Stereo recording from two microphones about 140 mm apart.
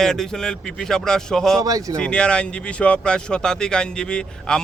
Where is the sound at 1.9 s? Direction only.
5° left (ahead or behind).